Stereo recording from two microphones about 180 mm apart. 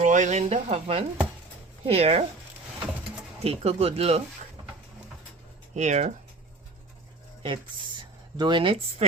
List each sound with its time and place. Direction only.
0.0 s speech: 40° right (ahead or behind)
3.4 s speech: 35° right (ahead or behind)
5.7 s speech: 40° right (ahead or behind)
7.4 s speech: 25° right (ahead or behind)